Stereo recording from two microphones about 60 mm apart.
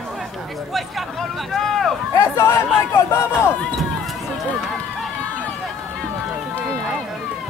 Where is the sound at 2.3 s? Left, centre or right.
Left.